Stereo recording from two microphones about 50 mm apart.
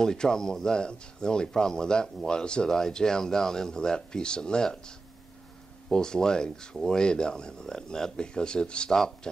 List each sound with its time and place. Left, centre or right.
0.0 s speech: centre